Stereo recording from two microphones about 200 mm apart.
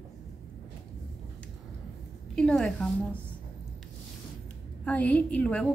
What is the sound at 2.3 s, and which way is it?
Speech, 5° left (ahead or behind).